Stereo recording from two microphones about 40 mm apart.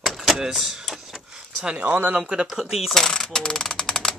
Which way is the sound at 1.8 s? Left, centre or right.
Right.